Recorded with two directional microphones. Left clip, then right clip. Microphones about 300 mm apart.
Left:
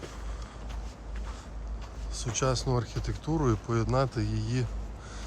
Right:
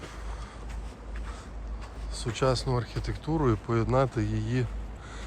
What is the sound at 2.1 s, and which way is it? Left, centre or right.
Speech, centre.